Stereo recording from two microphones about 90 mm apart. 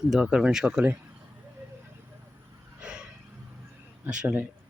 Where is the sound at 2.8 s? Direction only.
10° right (ahead or behind).